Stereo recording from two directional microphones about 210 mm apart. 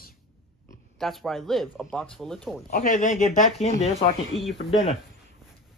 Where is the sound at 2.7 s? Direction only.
40° left (ahead or behind).